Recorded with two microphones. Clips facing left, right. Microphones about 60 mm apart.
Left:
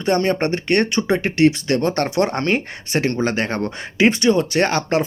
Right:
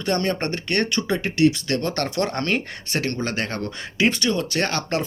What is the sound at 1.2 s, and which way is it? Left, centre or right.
Speech, left.